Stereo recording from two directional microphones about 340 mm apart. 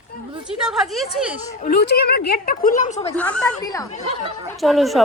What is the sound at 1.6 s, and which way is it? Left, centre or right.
A woman's voice, left.